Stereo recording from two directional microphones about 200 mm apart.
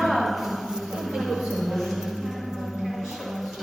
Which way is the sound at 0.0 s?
Centre (ahead or behind).